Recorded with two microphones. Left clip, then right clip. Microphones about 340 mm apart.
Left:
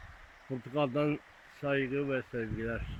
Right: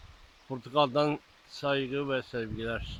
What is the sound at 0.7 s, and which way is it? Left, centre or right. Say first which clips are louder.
Speech: right 5 dB; right.